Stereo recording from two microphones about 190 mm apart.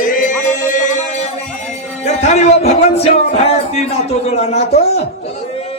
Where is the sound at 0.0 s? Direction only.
45° left (ahead or behind).